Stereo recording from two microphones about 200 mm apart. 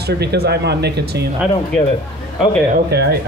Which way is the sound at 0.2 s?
55° right (ahead or behind).